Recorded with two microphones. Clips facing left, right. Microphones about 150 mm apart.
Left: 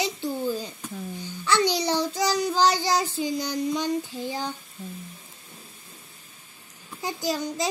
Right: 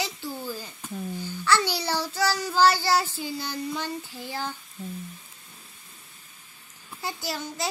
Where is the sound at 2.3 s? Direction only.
15° left (ahead or behind).